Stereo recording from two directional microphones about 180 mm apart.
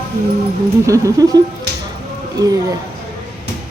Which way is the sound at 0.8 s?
15° right (ahead or behind).